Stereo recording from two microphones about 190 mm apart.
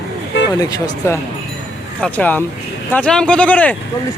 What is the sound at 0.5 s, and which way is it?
Speech, 20° left (ahead or behind).